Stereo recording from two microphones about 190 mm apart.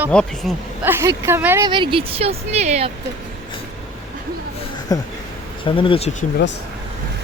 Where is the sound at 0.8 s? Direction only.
15° right (ahead or behind).